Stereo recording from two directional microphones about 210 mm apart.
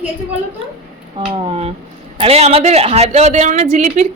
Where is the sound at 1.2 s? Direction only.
25° right (ahead or behind).